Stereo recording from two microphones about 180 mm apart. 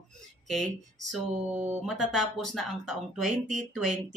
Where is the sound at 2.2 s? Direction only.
Centre (ahead or behind).